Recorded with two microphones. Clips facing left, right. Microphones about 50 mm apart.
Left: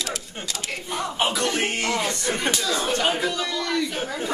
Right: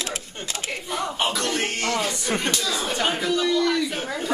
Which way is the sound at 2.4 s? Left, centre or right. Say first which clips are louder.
Left 1 dB; centre.